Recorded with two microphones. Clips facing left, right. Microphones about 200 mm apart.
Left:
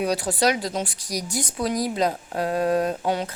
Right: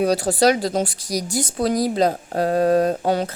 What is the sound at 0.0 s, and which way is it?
Speech, 35° right (ahead or behind).